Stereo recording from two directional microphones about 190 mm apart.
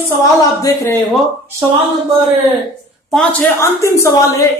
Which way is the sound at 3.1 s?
5° left (ahead or behind).